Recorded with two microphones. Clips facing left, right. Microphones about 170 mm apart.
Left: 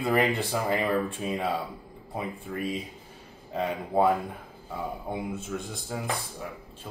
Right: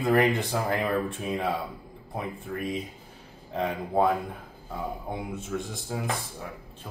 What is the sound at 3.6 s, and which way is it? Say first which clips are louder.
A man's voice: even; 5° left (ahead or behind).